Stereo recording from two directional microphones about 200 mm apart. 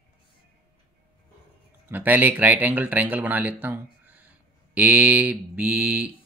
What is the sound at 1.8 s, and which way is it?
Speech, 10° right (ahead or behind).